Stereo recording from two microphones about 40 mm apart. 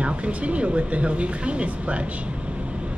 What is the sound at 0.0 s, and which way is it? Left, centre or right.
A woman's voice, right.